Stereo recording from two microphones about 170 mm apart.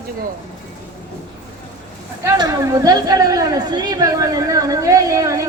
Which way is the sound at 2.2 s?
20° right (ahead or behind).